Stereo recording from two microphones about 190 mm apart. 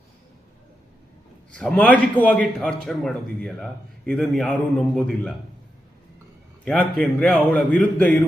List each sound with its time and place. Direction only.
1.5 s a man's voice: 5° left (ahead or behind)
6.7 s a man's voice: 5° left (ahead or behind)